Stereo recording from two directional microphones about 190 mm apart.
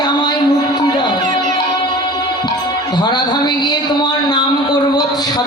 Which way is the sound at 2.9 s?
25° left (ahead or behind).